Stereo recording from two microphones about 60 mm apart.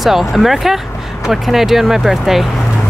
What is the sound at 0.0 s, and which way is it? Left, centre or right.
Speech, centre.